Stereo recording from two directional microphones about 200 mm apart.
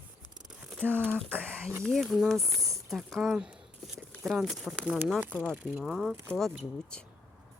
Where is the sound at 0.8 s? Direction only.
5° left (ahead or behind).